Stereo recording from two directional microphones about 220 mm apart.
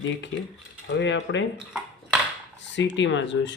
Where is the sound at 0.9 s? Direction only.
55° left (ahead or behind).